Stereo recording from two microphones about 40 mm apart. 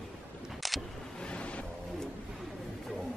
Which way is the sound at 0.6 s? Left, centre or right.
Centre.